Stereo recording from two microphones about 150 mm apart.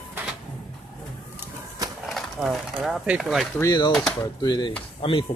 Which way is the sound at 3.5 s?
25° left (ahead or behind).